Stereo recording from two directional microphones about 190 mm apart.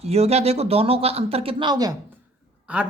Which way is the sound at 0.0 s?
35° right (ahead or behind).